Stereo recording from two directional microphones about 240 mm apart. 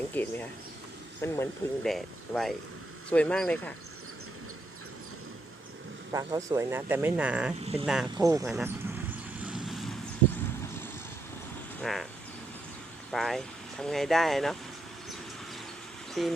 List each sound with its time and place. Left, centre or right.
0.1 s speech: centre
6.1 s speech: centre
7.6 s speech: right
7.9 s speech: centre
8.2 s speech: centre
8.4 s speech: centre
9.4 s vehicle: centre
11.8 s speech: centre
13.1 s speech: centre
16.2 s speech: centre